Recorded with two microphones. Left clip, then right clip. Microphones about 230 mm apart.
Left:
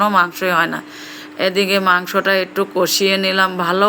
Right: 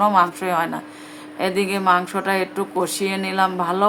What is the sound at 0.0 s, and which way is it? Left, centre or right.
Mantra, centre.